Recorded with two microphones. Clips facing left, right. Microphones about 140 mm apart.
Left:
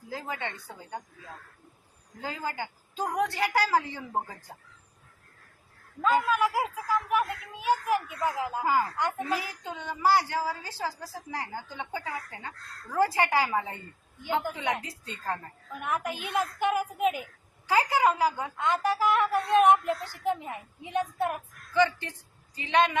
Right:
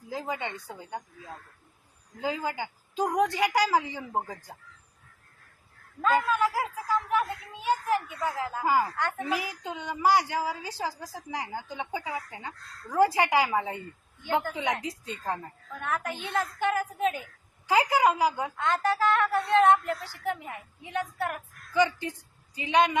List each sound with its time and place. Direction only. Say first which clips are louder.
0.1 s a woman's voice: right 2 dB; 15° right (ahead or behind)
2.2 s a woman's voice: right 3 dB; 15° right (ahead or behind)
6.0 s a woman's voice: even; 10° left (ahead or behind)
8.2 s a woman's voice: left 1 dB; 15° left (ahead or behind)
8.6 s a woman's voice: right 2 dB; 10° right (ahead or behind)
9.0 s a woman's voice: left 1 dB; 10° left (ahead or behind)
9.3 s a woman's voice: right 1 dB; 15° right (ahead or behind)
15.7 s a woman's voice: left 1 dB; 15° left (ahead or behind)
17.7 s a woman's voice: right 1 dB; 15° right (ahead or behind)
18.5 s a woman's voice: even; 10° left (ahead or behind)
21.7 s speech: even; 15° right (ahead or behind)